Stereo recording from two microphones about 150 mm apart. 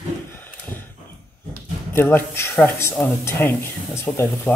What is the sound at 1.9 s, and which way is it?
A woman's voice, 15° left (ahead or behind).